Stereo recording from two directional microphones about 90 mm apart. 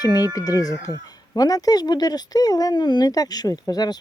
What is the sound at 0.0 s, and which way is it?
Speech, 45° left (ahead or behind).